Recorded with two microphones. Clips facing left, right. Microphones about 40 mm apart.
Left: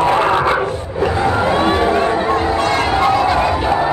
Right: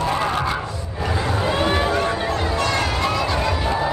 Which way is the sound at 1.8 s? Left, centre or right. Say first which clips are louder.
Left 6 dB; left.